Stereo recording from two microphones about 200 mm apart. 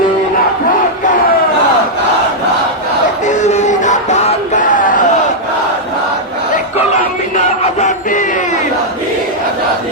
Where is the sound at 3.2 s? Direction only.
35° left (ahead or behind).